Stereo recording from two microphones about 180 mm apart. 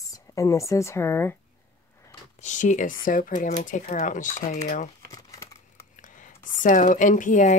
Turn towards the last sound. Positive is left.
turn(degrees=45)  # may be behind; listen again after turning